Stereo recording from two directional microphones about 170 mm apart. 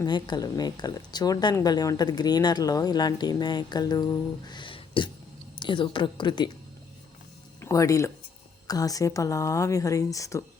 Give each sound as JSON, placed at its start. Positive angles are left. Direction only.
{"t": 0.0, "sound": "speech", "side_deg": 25}
{"t": 7.6, "sound": "speech", "side_deg": 20}